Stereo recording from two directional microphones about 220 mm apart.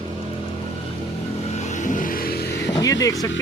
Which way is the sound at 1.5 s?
30° left (ahead or behind).